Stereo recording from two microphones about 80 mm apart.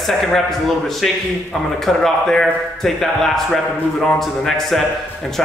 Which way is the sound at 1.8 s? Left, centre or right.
Centre.